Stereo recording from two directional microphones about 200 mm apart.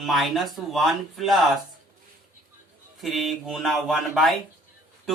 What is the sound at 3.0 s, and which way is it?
Speech, centre (ahead or behind).